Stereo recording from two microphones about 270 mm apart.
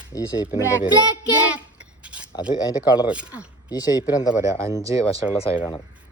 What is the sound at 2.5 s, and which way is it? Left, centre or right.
Speech, centre.